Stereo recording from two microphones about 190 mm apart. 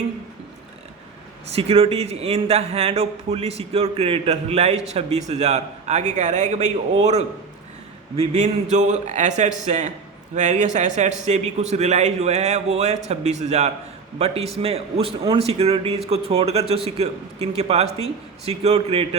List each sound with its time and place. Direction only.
1.5 s a man's voice: 30° right (ahead or behind)